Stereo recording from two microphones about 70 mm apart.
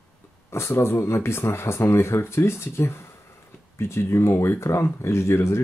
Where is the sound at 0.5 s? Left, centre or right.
Left.